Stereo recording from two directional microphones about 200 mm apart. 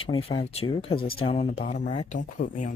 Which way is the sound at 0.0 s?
25° left (ahead or behind).